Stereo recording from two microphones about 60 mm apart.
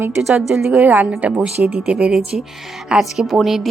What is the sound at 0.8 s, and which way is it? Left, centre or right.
Speech, right.